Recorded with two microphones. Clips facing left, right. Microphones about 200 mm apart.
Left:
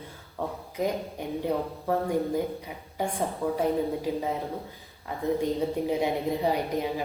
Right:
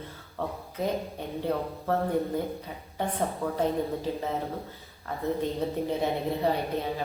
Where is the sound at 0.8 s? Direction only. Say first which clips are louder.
Left 1 dB; 15° left (ahead or behind).